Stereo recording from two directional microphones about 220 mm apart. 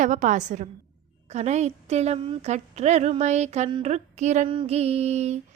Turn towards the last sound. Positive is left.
turn(degrees=-30)  # may be behind; listen again after turning